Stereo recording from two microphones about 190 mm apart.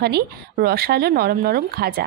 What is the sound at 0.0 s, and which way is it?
Speech, 55° right (ahead or behind).